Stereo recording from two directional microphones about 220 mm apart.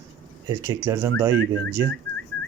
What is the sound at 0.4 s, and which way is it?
Speech, 15° right (ahead or behind).